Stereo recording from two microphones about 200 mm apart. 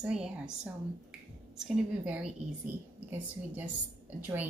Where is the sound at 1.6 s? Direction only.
5° right (ahead or behind).